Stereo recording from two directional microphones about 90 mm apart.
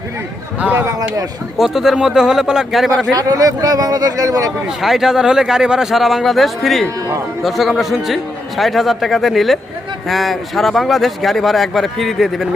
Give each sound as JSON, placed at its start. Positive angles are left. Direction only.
{"t": 0.6, "sound": "a man's voice", "side_deg": -20}
{"t": 1.5, "sound": "a man's voice", "side_deg": -5}
{"t": 3.2, "sound": "speech", "side_deg": -40}
{"t": 4.8, "sound": "a man's voice", "side_deg": -5}